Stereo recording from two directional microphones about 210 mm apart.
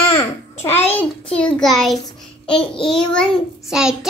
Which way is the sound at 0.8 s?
5° left (ahead or behind).